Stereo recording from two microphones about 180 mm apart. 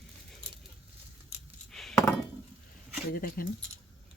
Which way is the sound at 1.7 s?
Centre (ahead or behind).